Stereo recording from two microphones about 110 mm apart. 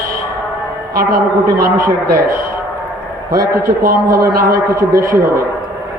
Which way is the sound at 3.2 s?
30° right (ahead or behind).